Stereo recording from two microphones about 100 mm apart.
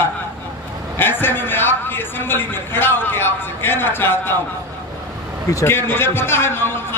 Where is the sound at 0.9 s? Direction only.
20° left (ahead or behind).